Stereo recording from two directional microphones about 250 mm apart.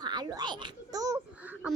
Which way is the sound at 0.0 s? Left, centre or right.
Centre.